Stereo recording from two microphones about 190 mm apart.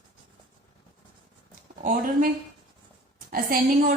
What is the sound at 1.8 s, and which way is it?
Speech, 45° right (ahead or behind).